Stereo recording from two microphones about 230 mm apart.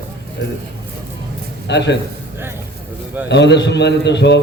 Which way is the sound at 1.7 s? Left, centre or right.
Left.